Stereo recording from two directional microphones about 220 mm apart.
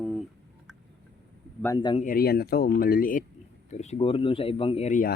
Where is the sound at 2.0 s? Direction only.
45° left (ahead or behind).